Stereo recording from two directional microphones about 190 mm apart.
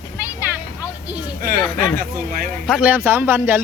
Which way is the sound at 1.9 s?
50° right (ahead or behind).